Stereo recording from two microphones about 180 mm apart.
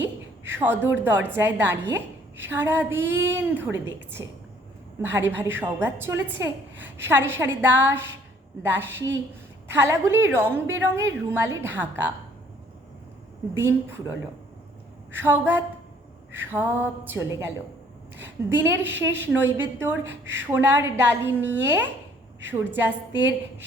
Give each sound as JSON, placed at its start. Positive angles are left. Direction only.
{"t": 0.5, "sound": "a woman's voice", "side_deg": -10}
{"t": 13.5, "sound": "a woman's voice", "side_deg": -15}
{"t": 15.1, "sound": "a woman's voice", "side_deg": -10}
{"t": 18.4, "sound": "a woman's voice", "side_deg": -15}
{"t": 20.1, "sound": "a woman's voice", "side_deg": -90}
{"t": 20.5, "sound": "a woman's voice", "side_deg": -15}